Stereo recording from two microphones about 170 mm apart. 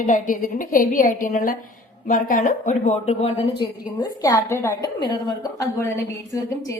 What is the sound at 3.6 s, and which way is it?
A woman's voice, 20° left (ahead or behind).